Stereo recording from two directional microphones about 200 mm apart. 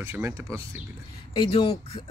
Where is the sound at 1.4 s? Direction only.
30° left (ahead or behind).